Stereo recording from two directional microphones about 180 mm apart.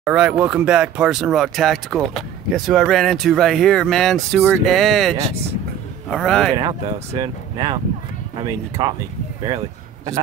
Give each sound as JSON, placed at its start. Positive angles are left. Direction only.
{"t": 0.0, "sound": "speech", "side_deg": -5}
{"t": 6.5, "sound": "speech", "side_deg": -25}